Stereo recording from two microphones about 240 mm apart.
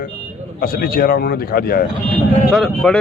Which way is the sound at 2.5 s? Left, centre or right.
Centre.